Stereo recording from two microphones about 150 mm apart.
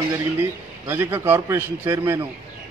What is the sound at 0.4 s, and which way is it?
A man's voice, 15° right (ahead or behind).